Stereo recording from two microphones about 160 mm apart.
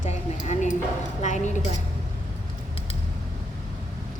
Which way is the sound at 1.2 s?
50° left (ahead or behind).